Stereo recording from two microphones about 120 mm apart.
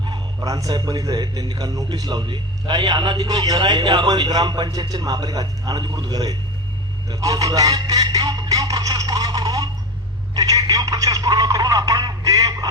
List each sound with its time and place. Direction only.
0.0 s a man's voice: 35° right (ahead or behind)